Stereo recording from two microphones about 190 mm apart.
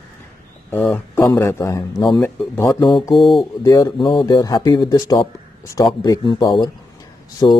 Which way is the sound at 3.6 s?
15° left (ahead or behind).